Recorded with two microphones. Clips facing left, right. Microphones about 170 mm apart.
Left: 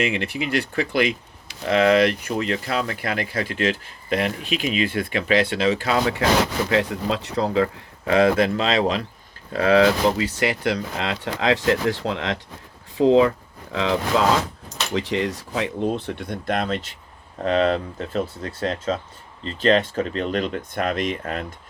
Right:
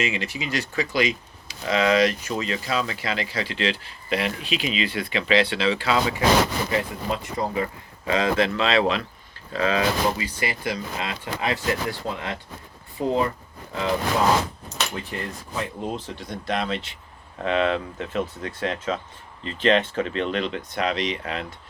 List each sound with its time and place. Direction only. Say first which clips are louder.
0.0 s speech: left 4 dB; 60° left (ahead or behind)
6.7 s speech: left 4 dB; 80° left; by 9.0 s 40° left (ahead or behind)
9.5 s speech: left 6 dB; 60° left (ahead or behind); by 15.7 s 85° left
16.0 s speech: left 5 dB; 60° left (ahead or behind)